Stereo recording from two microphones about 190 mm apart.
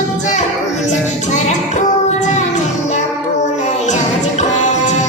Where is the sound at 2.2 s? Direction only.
40° left (ahead or behind).